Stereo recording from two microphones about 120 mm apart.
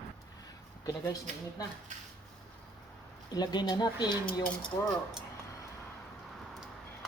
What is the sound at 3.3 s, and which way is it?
Speech, 35° left (ahead or behind).